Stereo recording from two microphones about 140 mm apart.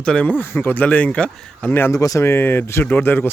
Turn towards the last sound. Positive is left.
turn(degrees=15)  # may be behind; listen again after turning